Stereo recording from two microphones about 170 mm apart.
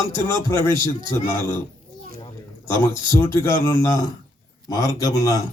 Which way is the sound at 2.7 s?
15° left (ahead or behind).